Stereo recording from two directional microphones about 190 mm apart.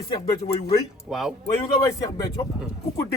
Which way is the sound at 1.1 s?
Centre (ahead or behind).